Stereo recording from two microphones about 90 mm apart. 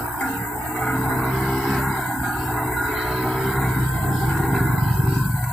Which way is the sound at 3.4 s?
Centre (ahead or behind).